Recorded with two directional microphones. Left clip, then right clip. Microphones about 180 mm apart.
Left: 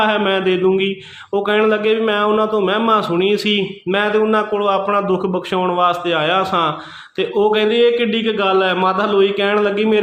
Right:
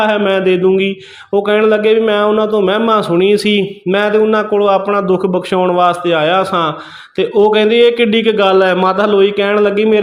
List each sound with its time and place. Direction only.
0.0 s a man's voice: 20° right (ahead or behind)